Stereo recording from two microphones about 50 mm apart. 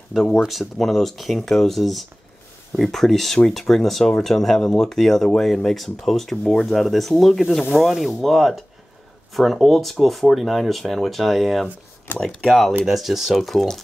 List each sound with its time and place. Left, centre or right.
0.5 s speech: centre
12.1 s speech: left
12.4 s speech: centre